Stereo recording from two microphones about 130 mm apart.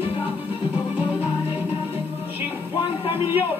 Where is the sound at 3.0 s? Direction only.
45° left (ahead or behind).